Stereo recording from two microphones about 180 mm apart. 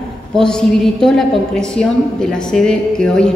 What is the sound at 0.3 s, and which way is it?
A woman's voice, 5° left (ahead or behind).